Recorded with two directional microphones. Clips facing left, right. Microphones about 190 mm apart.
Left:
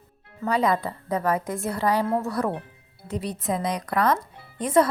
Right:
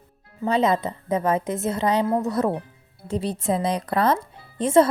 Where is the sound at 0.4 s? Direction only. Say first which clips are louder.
Right 2 dB; 25° right (ahead or behind).